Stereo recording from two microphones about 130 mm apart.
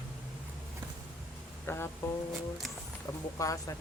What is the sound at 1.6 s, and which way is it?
Music, 20° left (ahead or behind).